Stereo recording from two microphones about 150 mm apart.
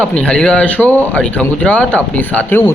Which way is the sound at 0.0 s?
5° left (ahead or behind).